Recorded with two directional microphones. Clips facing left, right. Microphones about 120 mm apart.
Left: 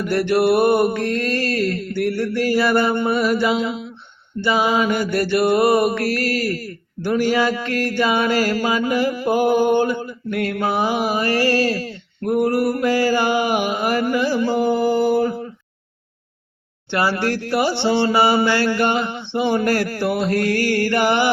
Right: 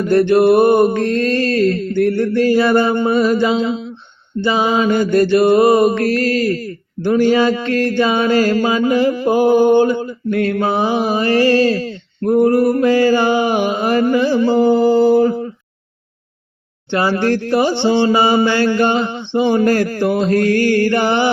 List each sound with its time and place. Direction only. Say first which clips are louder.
0.0 s mantra: right 6 dB; 25° right (ahead or behind)
16.9 s mantra: right 4 dB; 20° right (ahead or behind)